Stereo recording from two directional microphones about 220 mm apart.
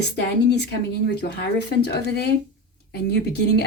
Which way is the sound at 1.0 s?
50° left (ahead or behind).